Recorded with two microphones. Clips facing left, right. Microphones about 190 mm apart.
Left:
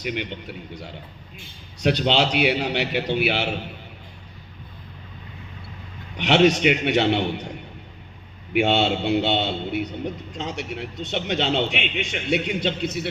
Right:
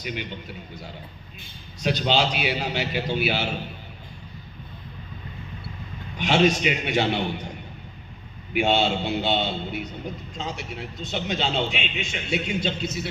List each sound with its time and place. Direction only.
0.0 s a man's voice: 65° left (ahead or behind)
6.1 s a man's voice: 70° left (ahead or behind)
8.5 s a man's voice: 70° left (ahead or behind)